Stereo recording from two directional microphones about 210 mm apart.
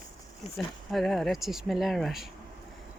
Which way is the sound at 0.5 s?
Centre (ahead or behind).